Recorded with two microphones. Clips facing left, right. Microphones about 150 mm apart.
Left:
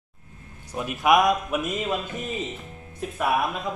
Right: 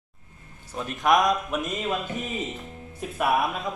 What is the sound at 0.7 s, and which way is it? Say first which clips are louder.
Speech: left 2 dB; 10° left (ahead or behind).